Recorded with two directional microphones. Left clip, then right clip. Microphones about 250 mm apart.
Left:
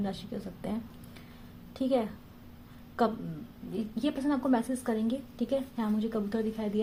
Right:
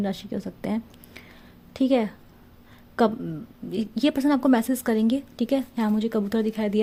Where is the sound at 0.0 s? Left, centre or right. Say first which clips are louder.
Right 7 dB; right.